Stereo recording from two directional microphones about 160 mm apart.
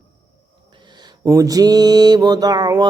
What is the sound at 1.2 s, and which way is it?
Mantra, 20° right (ahead or behind).